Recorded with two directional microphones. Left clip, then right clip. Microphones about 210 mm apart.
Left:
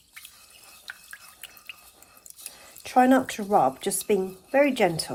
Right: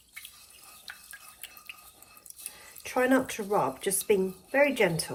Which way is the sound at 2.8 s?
45° left (ahead or behind).